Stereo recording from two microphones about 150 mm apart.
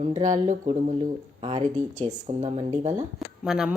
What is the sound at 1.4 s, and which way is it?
Speech, 40° right (ahead or behind).